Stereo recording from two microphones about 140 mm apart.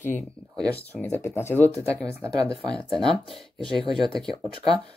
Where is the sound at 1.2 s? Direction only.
20° left (ahead or behind).